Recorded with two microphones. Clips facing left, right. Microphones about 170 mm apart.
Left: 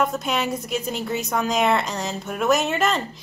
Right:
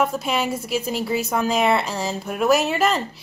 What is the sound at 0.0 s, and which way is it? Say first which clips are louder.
A woman's voice: right 1 dB; 5° right (ahead or behind).